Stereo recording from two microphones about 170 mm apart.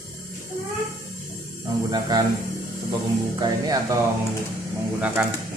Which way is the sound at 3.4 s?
25° right (ahead or behind).